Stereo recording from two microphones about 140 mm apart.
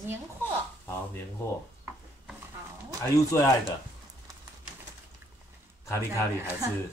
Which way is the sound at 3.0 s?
20° left (ahead or behind).